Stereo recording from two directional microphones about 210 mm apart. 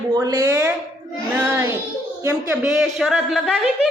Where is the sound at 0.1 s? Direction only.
20° right (ahead or behind).